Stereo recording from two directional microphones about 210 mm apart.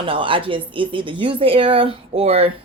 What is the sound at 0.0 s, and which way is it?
Speech, 25° right (ahead or behind).